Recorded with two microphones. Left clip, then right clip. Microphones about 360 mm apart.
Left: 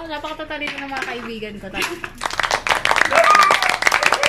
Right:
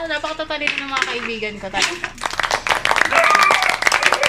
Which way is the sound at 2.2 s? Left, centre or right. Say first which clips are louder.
Even; centre.